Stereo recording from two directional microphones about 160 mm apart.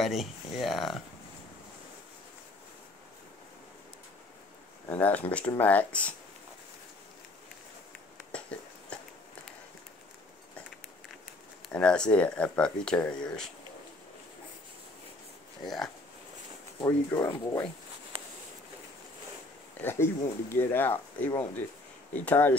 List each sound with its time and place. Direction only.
0.0 s speech: centre (ahead or behind)
4.8 s speech: 10° left (ahead or behind)
8.3 s a sound: 5° left (ahead or behind)
11.7 s speech: 5° left (ahead or behind)
15.6 s speech: centre (ahead or behind)
16.8 s speech: 20° left (ahead or behind)
19.8 s speech: 15° left (ahead or behind)